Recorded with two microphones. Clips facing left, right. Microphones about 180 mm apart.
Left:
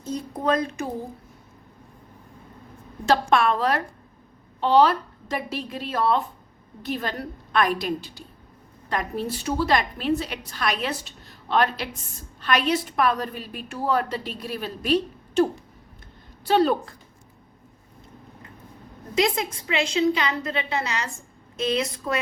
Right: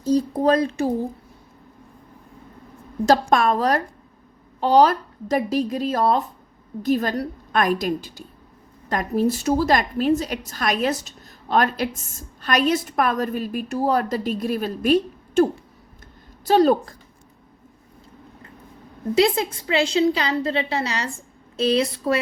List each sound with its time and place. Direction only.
0.0 s a woman's voice: 35° right (ahead or behind)
3.1 s a woman's voice: 40° right (ahead or behind)
16.5 s a woman's voice: 40° right (ahead or behind)
19.1 s a woman's voice: 30° right (ahead or behind)